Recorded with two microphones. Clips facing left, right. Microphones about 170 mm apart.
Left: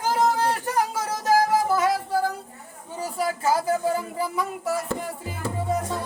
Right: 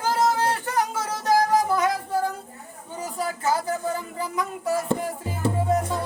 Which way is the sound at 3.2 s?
10° left (ahead or behind).